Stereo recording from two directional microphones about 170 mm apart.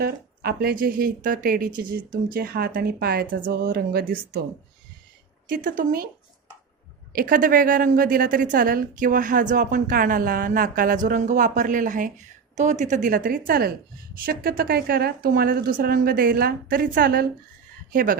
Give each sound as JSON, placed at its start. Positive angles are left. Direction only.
{"t": 0.0, "sound": "speech", "side_deg": -65}
{"t": 5.5, "sound": "speech", "side_deg": -55}
{"t": 7.1, "sound": "a woman's voice", "side_deg": -60}